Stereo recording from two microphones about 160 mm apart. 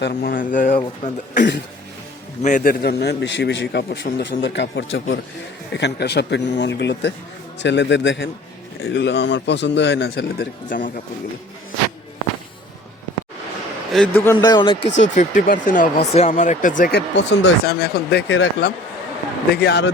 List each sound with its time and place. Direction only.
0.0 s speech: 70° left (ahead or behind); by 2.7 s 50° left (ahead or behind)
2.8 s a man's voice: 90° left; by 11.0 s 55° left (ahead or behind)
13.9 s a man's voice: 5° left (ahead or behind)
14.3 s a man's voice: 25° left (ahead or behind)
14.8 s a man's voice: 50° left (ahead or behind); by 19.9 s 90° left